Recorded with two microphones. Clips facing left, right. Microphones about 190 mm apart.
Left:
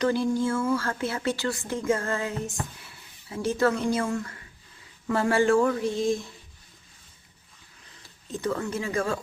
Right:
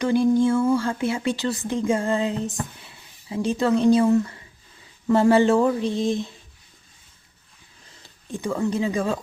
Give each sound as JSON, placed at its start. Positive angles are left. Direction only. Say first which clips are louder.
{"t": 0.0, "sound": "a woman's voice", "louder": "right 6 dB", "side_deg": -15}
{"t": 8.3, "sound": "a woman's voice", "louder": "right 4 dB", "side_deg": -15}